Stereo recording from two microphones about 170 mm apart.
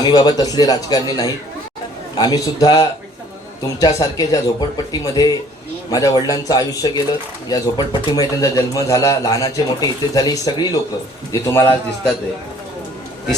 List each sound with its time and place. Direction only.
0.0 s a man's voice: 25° left (ahead or behind)